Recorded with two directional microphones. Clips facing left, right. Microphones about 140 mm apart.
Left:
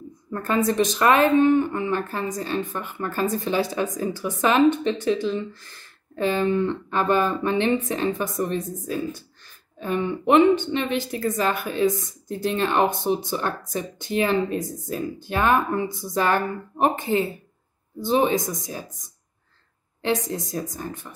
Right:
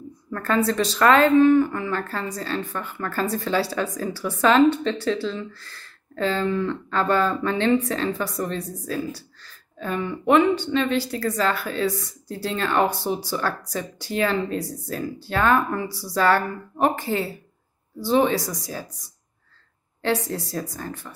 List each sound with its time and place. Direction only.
0.3 s a woman's voice: 15° left (ahead or behind)
20.2 s speech: 15° left (ahead or behind)